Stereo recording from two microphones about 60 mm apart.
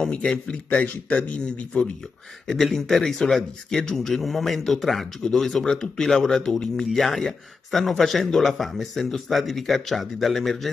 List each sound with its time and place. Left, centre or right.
0.0 s a man's voice: centre
2.4 s speech: centre